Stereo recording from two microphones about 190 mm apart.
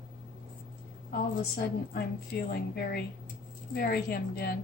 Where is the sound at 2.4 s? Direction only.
55° left (ahead or behind).